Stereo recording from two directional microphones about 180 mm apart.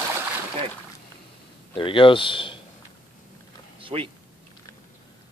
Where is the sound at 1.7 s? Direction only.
30° left (ahead or behind).